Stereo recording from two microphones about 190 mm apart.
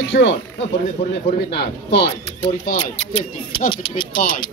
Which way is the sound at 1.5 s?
60° left (ahead or behind).